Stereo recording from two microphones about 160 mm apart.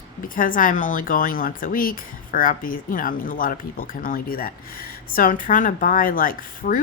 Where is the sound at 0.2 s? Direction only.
60° left (ahead or behind).